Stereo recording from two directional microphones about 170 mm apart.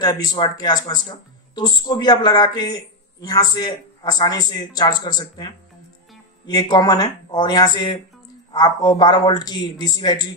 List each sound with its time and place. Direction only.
0.0 s speech: 20° left (ahead or behind)